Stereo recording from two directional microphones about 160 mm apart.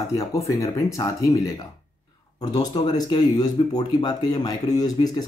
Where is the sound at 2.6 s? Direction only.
25° left (ahead or behind).